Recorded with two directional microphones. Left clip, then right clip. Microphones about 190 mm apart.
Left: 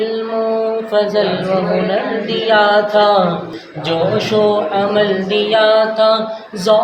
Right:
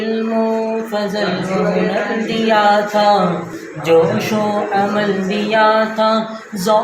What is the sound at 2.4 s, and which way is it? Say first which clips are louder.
Music: left 1 dB; 20° left (ahead or behind).